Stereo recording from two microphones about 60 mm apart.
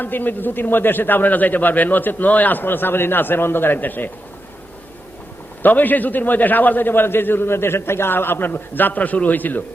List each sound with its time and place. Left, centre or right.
0.0 s a man's voice: left
5.6 s a man's voice: left